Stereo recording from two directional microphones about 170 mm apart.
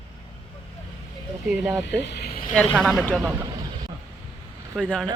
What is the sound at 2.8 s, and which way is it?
Speech, 5° left (ahead or behind).